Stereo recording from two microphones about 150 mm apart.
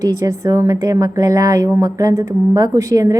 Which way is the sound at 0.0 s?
25° right (ahead or behind).